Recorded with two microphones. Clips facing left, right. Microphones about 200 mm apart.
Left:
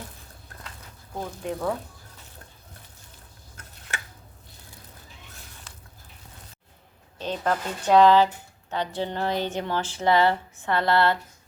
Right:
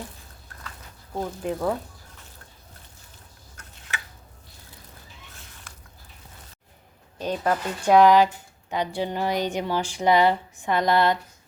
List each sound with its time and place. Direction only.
1.4 s speech: centre (ahead or behind)
7.2 s a woman's voice: 10° right (ahead or behind)